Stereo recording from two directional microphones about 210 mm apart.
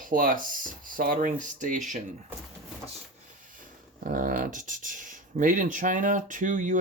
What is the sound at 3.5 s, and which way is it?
Speech, 40° right (ahead or behind).